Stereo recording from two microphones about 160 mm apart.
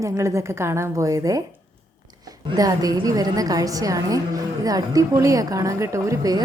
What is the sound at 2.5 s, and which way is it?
A woman's voice, 20° right (ahead or behind).